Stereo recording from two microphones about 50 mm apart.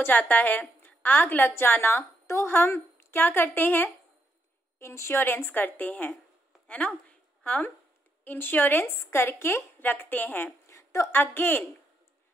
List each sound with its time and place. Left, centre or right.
0.0 s a woman's voice: left
2.2 s a woman's voice: left
3.2 s a woman's voice: left
4.7 s a woman's voice: left
5.2 s a woman's voice: left
7.1 s a sound: left
8.2 s a woman's voice: left
8.8 s a woman's voice: left
9.8 s a woman's voice: left
10.7 s a sound: left
11.1 s a woman's voice: left